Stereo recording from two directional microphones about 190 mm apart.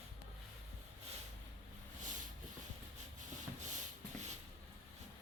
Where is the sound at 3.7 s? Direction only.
40° right (ahead or behind).